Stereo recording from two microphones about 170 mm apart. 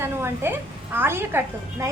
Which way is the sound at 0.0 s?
15° right (ahead or behind).